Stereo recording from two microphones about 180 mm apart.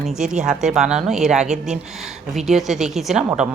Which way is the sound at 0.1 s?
5° right (ahead or behind).